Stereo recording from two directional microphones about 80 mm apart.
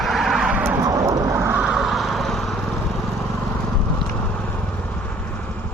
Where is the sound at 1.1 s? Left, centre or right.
Right.